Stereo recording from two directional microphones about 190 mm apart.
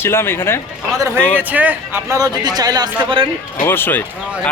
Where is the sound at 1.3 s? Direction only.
10° right (ahead or behind).